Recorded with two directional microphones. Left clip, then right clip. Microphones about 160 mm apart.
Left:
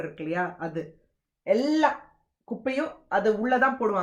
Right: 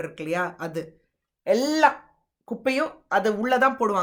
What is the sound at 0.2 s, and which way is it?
Speech, 25° right (ahead or behind).